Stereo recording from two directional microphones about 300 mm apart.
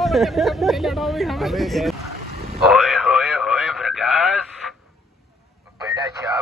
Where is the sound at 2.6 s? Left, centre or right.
Centre.